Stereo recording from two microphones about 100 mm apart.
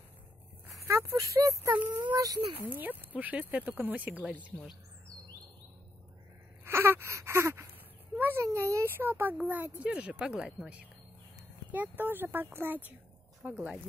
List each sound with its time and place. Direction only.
0.8 s speech: 30° right (ahead or behind)
2.7 s speech: 20° right (ahead or behind)
6.6 s wail: 25° right (ahead or behind)
8.2 s speech: 20° right (ahead or behind)
11.7 s speech: 20° right (ahead or behind)